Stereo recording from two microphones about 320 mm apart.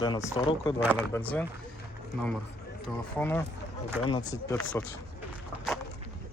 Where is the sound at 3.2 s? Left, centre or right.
Centre.